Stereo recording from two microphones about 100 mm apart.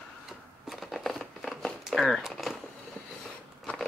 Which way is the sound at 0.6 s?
Centre (ahead or behind).